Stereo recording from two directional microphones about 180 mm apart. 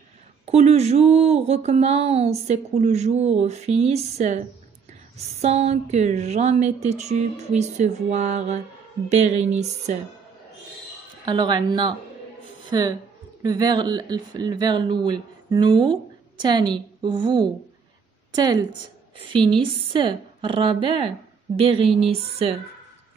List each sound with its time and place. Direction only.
0.5 s speech: 35° right (ahead or behind)
11.2 s a woman's voice: 25° right (ahead or behind)